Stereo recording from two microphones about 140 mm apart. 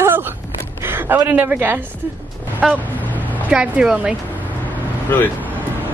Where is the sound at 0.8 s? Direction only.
15° right (ahead or behind).